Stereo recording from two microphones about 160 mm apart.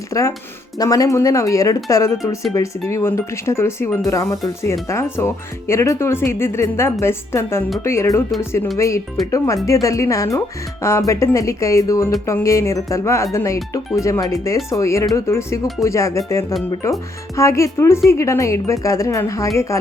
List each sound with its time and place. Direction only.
0.1 s speech: 20° left (ahead or behind)
9.2 s speech: centre (ahead or behind)
9.8 s speech: 20° left (ahead or behind)